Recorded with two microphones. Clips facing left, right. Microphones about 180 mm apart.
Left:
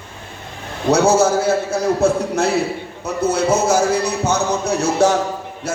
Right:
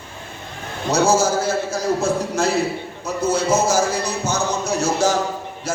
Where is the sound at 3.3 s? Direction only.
60° left (ahead or behind).